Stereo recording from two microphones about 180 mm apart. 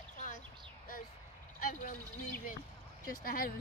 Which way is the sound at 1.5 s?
50° left (ahead or behind).